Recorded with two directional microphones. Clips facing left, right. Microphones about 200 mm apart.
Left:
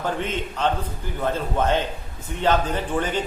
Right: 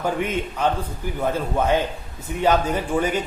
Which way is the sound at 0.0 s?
10° right (ahead or behind).